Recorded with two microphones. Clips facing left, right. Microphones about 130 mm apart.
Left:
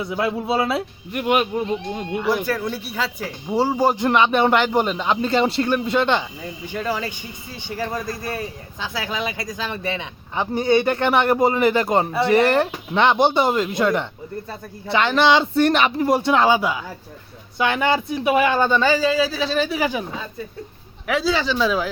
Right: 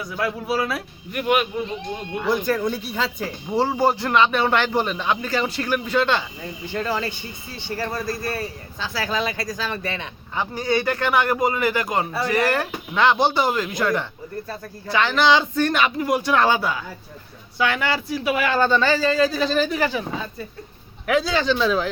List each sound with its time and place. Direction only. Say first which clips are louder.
0.0 s speech: left 3 dB; 25° left (ahead or behind)
2.2 s speech: right 2 dB; 5° left (ahead or behind); by 6.2 s 20° left (ahead or behind)
6.4 s speech: even; 10° left (ahead or behind)
21.1 s a man's voice: right 1 dB; centre (ahead or behind)